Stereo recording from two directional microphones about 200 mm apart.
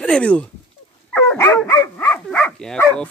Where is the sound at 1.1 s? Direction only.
10° left (ahead or behind).